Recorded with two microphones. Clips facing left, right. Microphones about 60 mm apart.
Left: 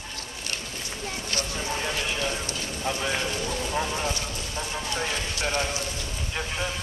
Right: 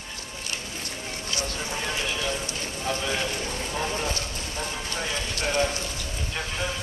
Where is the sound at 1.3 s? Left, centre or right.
Left.